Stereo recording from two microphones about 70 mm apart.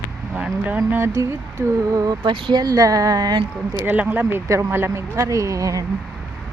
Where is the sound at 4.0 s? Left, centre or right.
Right.